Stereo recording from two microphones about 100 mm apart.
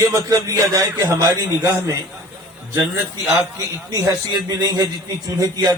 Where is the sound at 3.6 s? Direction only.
35° right (ahead or behind).